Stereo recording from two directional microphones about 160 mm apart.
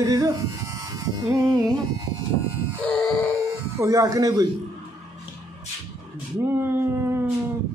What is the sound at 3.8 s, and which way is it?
Music, 20° right (ahead or behind).